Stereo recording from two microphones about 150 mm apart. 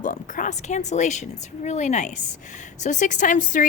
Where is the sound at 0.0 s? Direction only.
60° left (ahead or behind).